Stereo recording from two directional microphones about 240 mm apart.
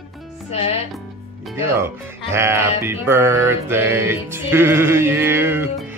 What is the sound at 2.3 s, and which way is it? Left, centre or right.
Music, centre.